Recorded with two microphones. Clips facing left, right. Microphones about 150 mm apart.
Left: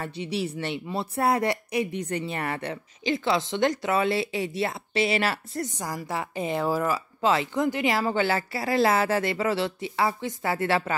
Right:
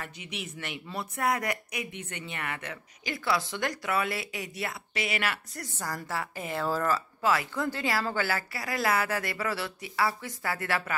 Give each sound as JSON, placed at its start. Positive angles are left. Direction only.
{"t": 0.0, "sound": "speech", "side_deg": 30}
{"t": 7.2, "sound": "speech", "side_deg": 25}